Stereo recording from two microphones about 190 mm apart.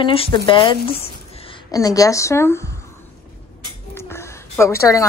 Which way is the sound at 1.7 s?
20° left (ahead or behind).